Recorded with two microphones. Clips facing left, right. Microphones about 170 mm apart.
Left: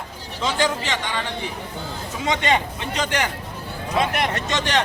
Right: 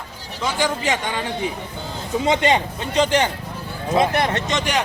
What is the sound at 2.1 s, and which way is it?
Speech, 25° right (ahead or behind).